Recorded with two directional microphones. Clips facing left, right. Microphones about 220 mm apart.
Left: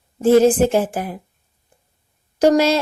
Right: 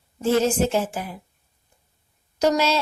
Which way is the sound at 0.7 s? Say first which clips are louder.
Left 5 dB; 55° left (ahead or behind).